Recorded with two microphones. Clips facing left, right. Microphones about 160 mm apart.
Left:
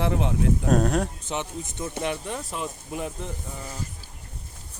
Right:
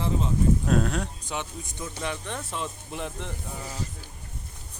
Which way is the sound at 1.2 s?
20° left (ahead or behind).